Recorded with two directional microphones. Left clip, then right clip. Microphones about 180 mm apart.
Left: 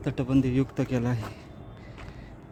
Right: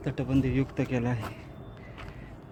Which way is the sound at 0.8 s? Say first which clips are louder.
Left 1 dB; 25° left (ahead or behind).